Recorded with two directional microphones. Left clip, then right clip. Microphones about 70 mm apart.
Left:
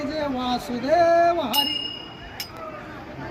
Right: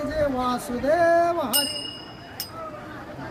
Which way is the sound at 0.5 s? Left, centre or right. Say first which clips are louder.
Left 2 dB; right.